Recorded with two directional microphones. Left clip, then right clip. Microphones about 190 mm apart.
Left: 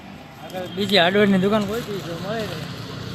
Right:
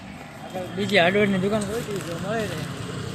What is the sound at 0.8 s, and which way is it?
Speech, 20° left (ahead or behind).